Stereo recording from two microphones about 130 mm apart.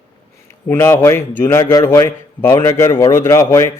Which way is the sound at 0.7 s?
20° left (ahead or behind).